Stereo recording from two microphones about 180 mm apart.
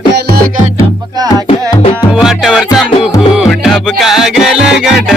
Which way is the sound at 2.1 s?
5° right (ahead or behind).